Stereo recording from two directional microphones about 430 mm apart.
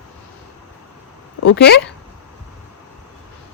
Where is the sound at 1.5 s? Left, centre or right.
Left.